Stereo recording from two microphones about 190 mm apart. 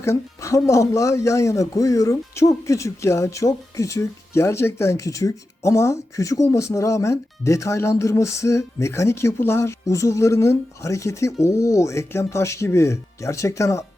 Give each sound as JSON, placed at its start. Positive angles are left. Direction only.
{"t": 0.0, "sound": "speech", "side_deg": 15}